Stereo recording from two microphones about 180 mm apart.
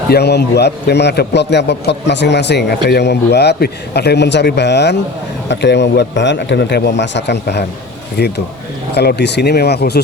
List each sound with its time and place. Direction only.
0.1 s a man's voice: 65° left (ahead or behind)